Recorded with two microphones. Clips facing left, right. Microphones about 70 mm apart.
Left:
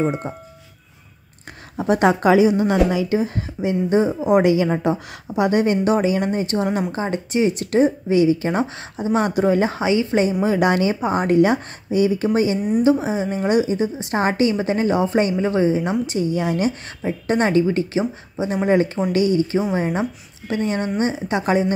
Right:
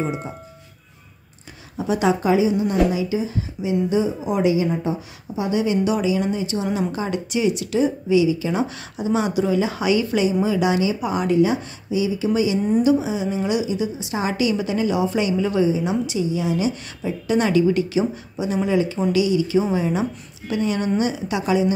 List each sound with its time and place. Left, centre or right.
0.0 s speech: centre
1.8 s a woman's voice: left
2.1 s a woman's voice: left
6.9 s a woman's voice: left
9.8 s a woman's voice: left
10.4 s a woman's voice: left
11.0 s a woman's voice: left
11.3 s a woman's voice: left
13.0 s a woman's voice: left
15.7 s a woman's voice: left
18.7 s a woman's voice: left